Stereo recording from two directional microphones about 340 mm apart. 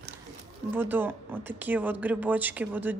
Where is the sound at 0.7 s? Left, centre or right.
Centre.